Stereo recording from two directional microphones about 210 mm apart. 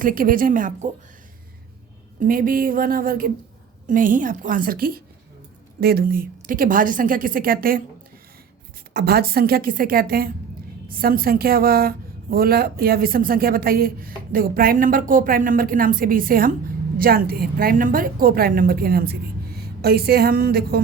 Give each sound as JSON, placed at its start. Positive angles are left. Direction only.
{"t": 0.0, "sound": "a woman's voice", "side_deg": -40}
{"t": 2.1, "sound": "a woman's voice", "side_deg": -40}
{"t": 8.9, "sound": "speech", "side_deg": -50}